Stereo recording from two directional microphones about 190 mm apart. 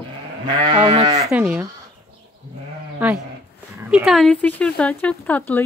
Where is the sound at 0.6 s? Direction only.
25° right (ahead or behind).